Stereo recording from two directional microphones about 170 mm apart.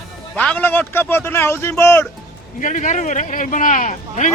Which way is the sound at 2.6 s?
45° left (ahead or behind).